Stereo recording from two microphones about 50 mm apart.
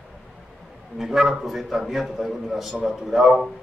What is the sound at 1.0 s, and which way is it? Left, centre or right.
A man's voice, centre.